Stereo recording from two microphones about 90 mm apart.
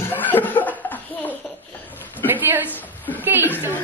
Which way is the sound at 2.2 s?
20° right (ahead or behind).